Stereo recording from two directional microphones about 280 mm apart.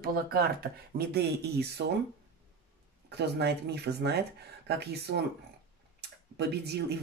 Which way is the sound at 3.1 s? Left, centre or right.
Right.